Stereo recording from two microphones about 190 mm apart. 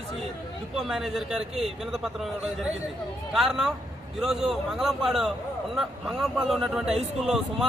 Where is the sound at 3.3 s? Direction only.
Centre (ahead or behind).